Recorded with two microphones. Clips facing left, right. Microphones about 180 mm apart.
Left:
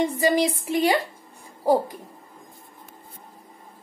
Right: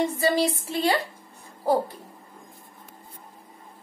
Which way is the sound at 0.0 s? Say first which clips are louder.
Left 2 dB; 15° left (ahead or behind).